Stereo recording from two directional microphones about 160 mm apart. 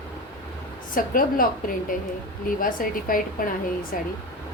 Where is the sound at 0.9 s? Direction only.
60° left (ahead or behind).